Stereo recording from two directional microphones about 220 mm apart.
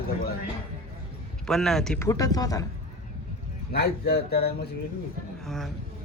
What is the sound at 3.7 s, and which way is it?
Speech, 45° left (ahead or behind).